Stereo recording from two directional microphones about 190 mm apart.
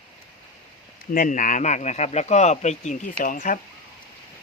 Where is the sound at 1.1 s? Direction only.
45° left (ahead or behind).